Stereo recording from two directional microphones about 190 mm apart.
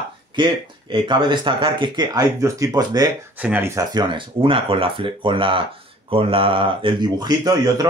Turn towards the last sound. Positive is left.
turn(degrees=-20)  # may be behind; listen again after turning